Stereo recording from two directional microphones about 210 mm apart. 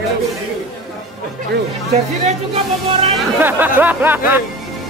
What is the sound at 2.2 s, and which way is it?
Speech, 30° right (ahead or behind).